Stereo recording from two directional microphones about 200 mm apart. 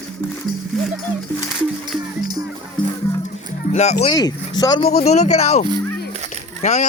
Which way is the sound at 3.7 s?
35° left (ahead or behind).